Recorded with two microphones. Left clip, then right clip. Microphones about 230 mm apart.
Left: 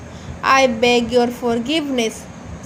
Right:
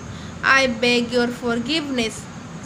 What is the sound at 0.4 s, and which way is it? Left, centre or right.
A woman's voice, centre.